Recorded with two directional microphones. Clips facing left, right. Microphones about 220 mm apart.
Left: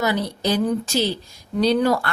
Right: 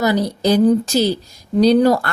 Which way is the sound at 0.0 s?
40° right (ahead or behind).